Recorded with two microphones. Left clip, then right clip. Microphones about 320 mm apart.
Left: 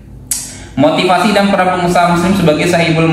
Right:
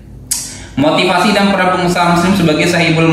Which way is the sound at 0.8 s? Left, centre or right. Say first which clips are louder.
Left 1 dB; left.